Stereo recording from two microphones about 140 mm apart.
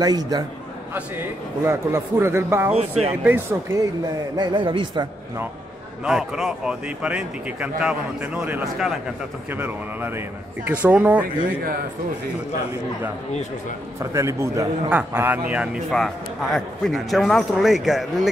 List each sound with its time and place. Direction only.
0.0 s a man's voice: 25° right (ahead or behind)
0.9 s a man's voice: 15° right (ahead or behind)
2.7 s speech: 45° right (ahead or behind)
3.3 s a man's voice: 15° right (ahead or behind)
4.4 s a man's voice: 35° right (ahead or behind)
6.0 s a man's voice: 5° right (ahead or behind)
13.9 s a man's voice: 20° right (ahead or behind); by 18.3 s centre (ahead or behind)